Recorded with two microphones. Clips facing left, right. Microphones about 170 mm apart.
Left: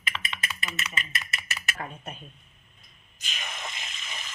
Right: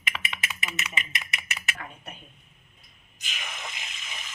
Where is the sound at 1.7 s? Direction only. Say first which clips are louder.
Left 4 dB; 35° left (ahead or behind).